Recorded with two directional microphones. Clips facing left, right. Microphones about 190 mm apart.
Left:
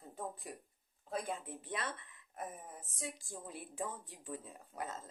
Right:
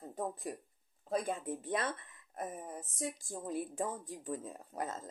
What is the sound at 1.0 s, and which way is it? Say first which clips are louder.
Speech: right 5 dB; 45° right (ahead or behind).